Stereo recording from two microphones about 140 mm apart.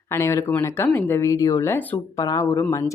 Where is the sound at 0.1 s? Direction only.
20° left (ahead or behind).